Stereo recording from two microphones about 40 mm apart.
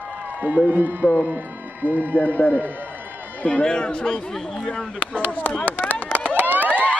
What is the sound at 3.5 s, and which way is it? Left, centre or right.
Speech, left.